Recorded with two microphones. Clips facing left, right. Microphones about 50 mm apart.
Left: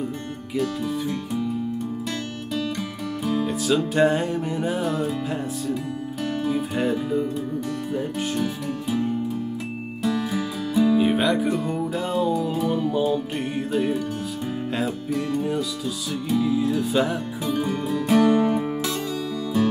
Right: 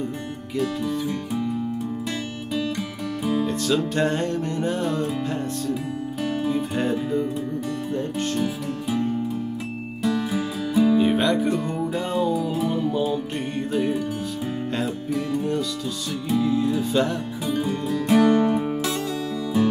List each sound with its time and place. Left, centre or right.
0.6 s music: centre
3.4 s music: centre
7.9 s speech: centre
10.0 s music: centre